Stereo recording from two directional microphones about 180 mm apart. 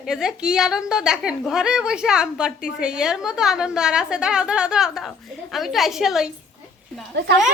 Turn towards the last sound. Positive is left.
turn(degrees=-70)  # may be behind; listen again after turning